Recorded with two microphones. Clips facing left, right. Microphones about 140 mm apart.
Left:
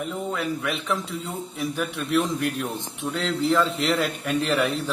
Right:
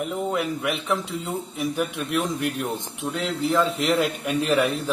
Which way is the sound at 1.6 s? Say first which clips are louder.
Right 1 dB; centre (ahead or behind).